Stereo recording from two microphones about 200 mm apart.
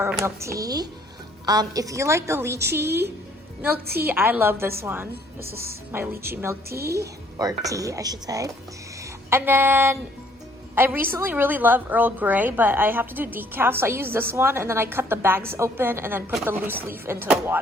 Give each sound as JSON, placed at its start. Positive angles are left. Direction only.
{"t": 0.0, "sound": "a woman's voice", "side_deg": -10}